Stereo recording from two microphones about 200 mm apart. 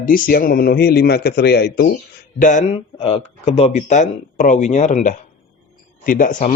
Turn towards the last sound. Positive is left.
turn(degrees=40)  # may be behind; listen again after turning